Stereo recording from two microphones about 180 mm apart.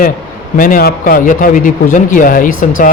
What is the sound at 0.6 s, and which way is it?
Speech, 50° left (ahead or behind).